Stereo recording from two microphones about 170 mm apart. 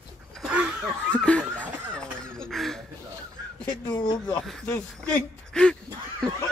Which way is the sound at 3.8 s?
25° left (ahead or behind).